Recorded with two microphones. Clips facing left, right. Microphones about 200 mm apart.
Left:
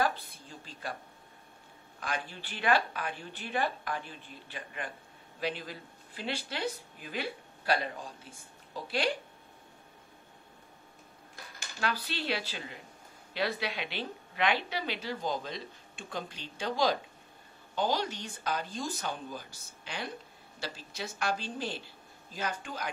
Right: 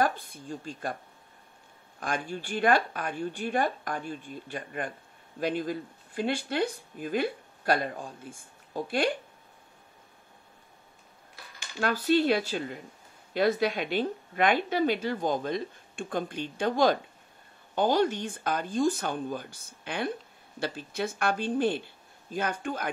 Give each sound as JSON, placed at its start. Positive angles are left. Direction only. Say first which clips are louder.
{"t": 0.0, "sound": "speech", "louder": "right 3 dB", "side_deg": -50}
{"t": 2.0, "sound": "speech", "louder": "right 5 dB", "side_deg": -50}
{"t": 11.8, "sound": "speech", "louder": "right 11 dB", "side_deg": -50}